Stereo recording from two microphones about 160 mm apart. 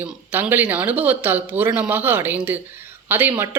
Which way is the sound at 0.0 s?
10° right (ahead or behind).